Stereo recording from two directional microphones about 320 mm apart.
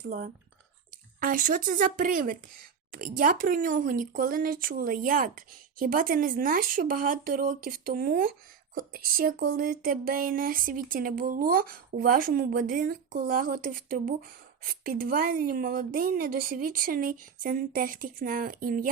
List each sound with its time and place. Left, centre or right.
0.0 s speech: right